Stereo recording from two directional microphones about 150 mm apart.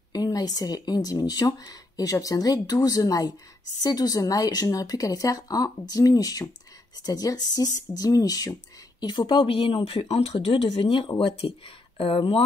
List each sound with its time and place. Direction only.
0.1 s speech: 25° left (ahead or behind)